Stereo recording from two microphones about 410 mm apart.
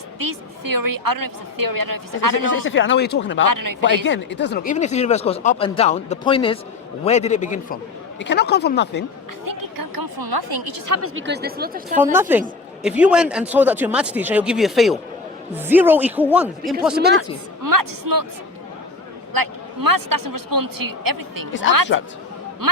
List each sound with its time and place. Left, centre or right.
0.2 s a woman's voice: right
2.6 s speech: left
3.4 s a woman's voice: right
4.0 s speech: left
9.4 s speech: right
10.9 s speech: right
12.1 s a woman's voice: centre
17.0 s speech: right
17.6 s a woman's voice: right
19.3 s a woman's voice: right
21.9 s speech: left
22.6 s a woman's voice: right